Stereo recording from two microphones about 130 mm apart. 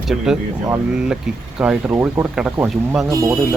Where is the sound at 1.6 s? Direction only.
10° right (ahead or behind).